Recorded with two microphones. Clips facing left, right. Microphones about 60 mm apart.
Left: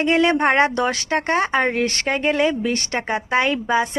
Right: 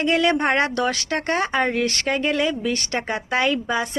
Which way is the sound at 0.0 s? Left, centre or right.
Left.